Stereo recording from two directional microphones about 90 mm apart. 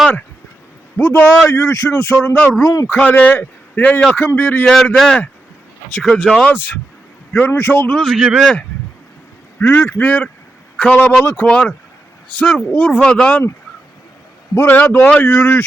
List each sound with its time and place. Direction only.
0.9 s speech: 25° left (ahead or behind)
1.9 s speech: 20° left (ahead or behind)
2.6 s a man's voice: 40° left (ahead or behind)
2.8 s speech: 15° left (ahead or behind)
4.6 s a man's voice: 5° left (ahead or behind)
6.5 s speech: 20° left (ahead or behind)
8.0 s a man's voice: 5° right (ahead or behind)
9.6 s a man's voice: 20° left (ahead or behind)
13.0 s speech: 10° left (ahead or behind)
14.5 s speech: 25° left (ahead or behind)